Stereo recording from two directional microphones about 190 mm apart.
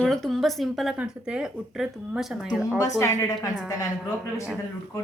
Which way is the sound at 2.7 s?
15° left (ahead or behind).